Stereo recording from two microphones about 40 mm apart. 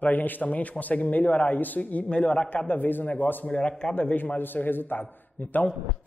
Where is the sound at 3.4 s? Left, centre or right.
Left.